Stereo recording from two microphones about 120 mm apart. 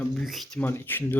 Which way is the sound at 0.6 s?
20° left (ahead or behind).